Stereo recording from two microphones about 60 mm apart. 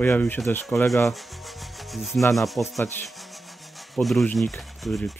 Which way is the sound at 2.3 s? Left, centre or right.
Centre.